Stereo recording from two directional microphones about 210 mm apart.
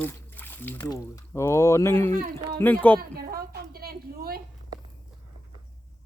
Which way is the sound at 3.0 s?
45° right (ahead or behind).